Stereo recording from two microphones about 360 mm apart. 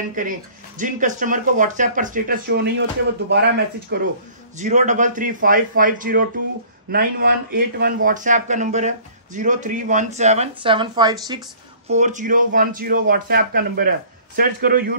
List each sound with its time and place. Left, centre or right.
0.1 s speech: right